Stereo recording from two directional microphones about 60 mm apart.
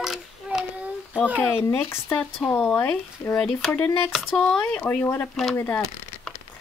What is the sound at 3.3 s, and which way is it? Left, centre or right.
Speech, centre.